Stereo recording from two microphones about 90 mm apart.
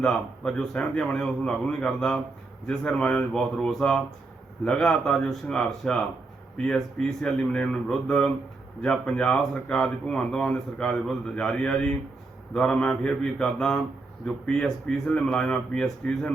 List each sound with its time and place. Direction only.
0.0 s speech: 10° left (ahead or behind)